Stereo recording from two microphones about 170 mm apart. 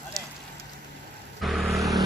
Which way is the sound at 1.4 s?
Centre (ahead or behind).